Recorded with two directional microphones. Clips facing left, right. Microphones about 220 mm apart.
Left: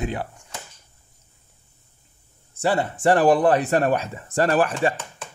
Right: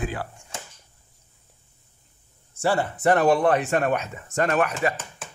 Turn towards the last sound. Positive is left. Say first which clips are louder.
# left 3 dB
turn(degrees=30)  # may be behind; listen again after turning